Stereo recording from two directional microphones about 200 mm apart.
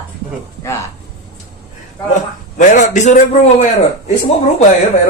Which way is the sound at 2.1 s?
40° left (ahead or behind).